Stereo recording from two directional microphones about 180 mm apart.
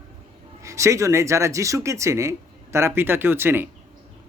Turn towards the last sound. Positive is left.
turn(degrees=-10)  # may be behind; listen again after turning